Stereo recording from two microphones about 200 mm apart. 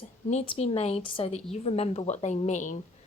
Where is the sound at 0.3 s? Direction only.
30° left (ahead or behind).